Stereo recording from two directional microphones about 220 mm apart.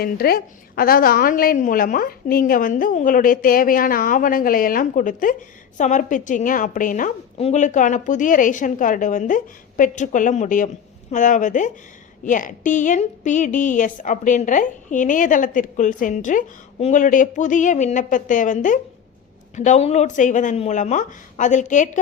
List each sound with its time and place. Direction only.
0.0 s a woman's voice: 45° left (ahead or behind)